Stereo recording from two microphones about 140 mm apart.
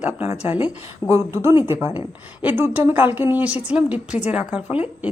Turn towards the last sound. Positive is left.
turn(degrees=-10)  # may be behind; listen again after turning